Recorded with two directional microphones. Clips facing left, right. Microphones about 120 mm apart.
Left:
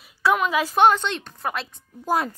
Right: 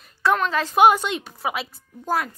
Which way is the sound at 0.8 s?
10° right (ahead or behind).